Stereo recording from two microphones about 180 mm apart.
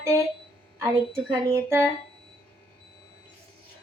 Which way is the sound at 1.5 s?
15° right (ahead or behind).